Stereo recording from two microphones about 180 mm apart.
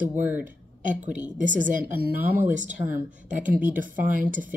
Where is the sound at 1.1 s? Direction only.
45° right (ahead or behind).